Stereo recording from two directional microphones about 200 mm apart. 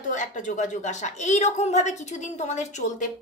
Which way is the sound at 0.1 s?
40° left (ahead or behind).